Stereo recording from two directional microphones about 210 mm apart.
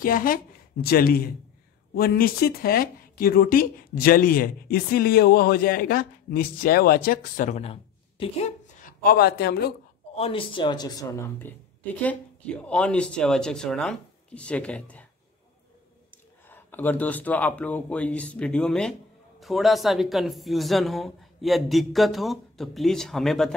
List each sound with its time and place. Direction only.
0.0 s a woman's voice: 40° left (ahead or behind)
10.1 s speech: 25° left (ahead or behind); by 15.0 s 5° left (ahead or behind)
16.4 s a woman's voice: 10° left (ahead or behind)